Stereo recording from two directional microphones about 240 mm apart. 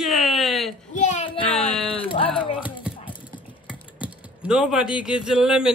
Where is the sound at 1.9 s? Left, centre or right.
Left.